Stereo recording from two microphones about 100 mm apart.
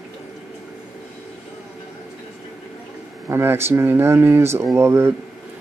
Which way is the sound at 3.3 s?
25° right (ahead or behind).